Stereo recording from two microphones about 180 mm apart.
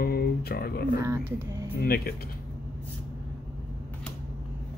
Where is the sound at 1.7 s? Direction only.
60° left (ahead or behind).